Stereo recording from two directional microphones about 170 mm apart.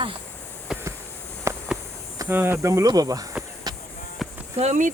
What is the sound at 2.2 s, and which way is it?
Speech, 10° right (ahead or behind).